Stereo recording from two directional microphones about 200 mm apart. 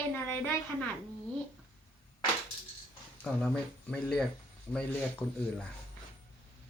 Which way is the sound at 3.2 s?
5° left (ahead or behind).